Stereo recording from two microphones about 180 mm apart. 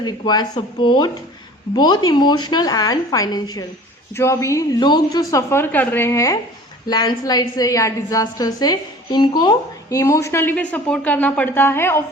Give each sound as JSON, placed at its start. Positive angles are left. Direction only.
{"t": 0.0, "sound": "a woman's voice", "side_deg": 25}